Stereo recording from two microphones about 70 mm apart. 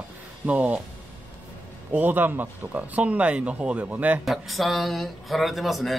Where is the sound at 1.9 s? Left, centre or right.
Right.